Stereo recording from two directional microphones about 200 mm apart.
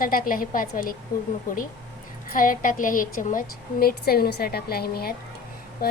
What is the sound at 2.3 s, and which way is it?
A woman's voice, 40° left (ahead or behind).